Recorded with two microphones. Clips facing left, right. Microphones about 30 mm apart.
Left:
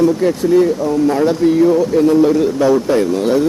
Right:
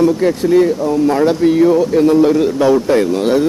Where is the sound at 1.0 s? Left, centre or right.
Right.